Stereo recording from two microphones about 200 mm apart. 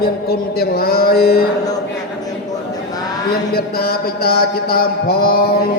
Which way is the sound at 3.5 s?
50° left (ahead or behind).